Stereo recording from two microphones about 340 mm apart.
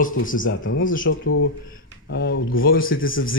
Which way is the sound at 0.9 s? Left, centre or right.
Left.